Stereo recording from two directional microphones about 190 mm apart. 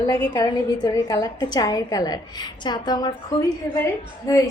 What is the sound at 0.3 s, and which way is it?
A woman's voice, 20° left (ahead or behind).